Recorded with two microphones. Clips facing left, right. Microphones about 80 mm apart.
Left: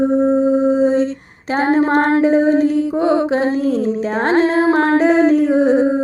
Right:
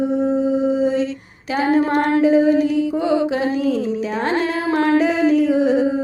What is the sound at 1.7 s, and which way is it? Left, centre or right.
Mantra, left.